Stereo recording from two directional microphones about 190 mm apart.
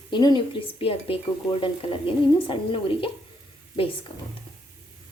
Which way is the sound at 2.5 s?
25° left (ahead or behind).